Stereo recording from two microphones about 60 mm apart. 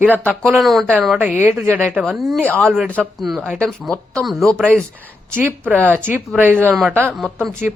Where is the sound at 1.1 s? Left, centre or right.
Right.